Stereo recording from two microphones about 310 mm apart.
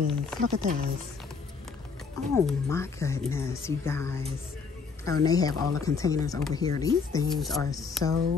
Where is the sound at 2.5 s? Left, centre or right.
Centre.